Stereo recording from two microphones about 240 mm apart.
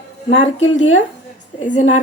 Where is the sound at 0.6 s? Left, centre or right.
Left.